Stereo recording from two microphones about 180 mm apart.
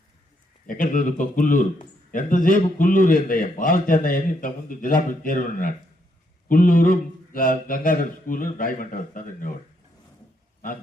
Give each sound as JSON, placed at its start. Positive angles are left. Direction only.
{"t": 0.7, "sound": "a man's voice", "side_deg": 50}